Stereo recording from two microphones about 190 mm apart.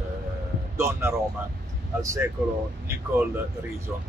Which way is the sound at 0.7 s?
10° right (ahead or behind).